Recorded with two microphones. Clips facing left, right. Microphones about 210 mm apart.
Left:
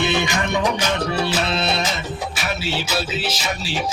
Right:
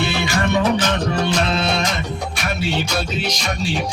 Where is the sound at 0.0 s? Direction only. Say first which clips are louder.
Left 1 dB; 20° left (ahead or behind).